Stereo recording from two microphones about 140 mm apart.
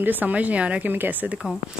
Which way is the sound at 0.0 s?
10° right (ahead or behind).